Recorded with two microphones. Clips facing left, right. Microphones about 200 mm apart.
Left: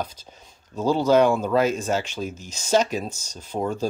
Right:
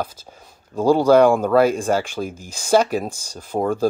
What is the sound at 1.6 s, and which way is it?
Speech, 10° right (ahead or behind).